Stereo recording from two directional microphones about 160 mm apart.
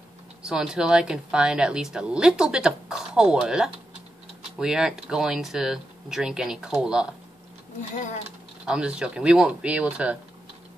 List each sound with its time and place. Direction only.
0.5 s a woman's voice: 5° right (ahead or behind)
7.9 s speech: 50° left (ahead or behind)
8.6 s speech: 5° right (ahead or behind)